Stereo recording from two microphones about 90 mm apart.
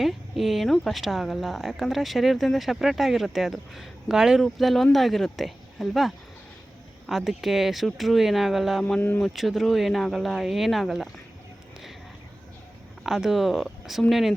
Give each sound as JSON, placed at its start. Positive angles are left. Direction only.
{"t": 0.0, "sound": "speech", "side_deg": 0}
{"t": 9.0, "sound": "speech", "side_deg": 20}
{"t": 9.2, "sound": "speech", "side_deg": 0}
{"t": 13.1, "sound": "speech", "side_deg": -5}